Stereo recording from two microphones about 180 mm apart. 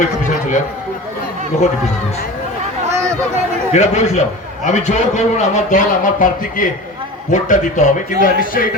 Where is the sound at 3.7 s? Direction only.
40° left (ahead or behind).